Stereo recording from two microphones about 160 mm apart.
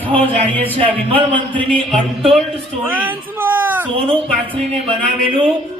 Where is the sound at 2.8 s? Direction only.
10° right (ahead or behind).